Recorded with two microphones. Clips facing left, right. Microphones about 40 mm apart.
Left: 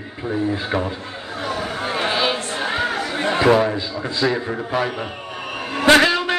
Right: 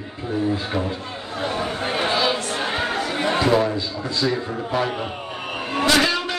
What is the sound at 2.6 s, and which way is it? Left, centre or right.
Chatter, centre.